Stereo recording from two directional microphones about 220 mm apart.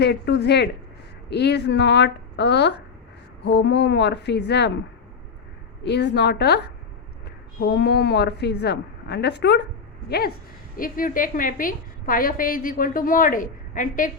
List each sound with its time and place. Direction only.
0.0 s speech: 50° left (ahead or behind)
5.8 s speech: 50° left (ahead or behind)
7.6 s a woman's voice: 50° left (ahead or behind)